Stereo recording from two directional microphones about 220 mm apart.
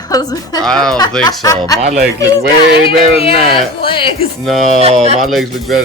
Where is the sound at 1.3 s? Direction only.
15° left (ahead or behind).